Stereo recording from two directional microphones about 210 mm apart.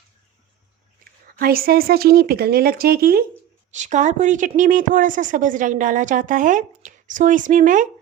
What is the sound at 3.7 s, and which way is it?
Speech, 35° right (ahead or behind).